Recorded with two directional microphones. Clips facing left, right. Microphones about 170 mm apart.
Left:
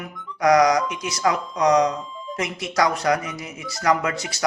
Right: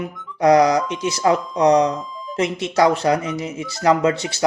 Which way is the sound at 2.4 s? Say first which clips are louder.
Right 5 dB; 25° right (ahead or behind).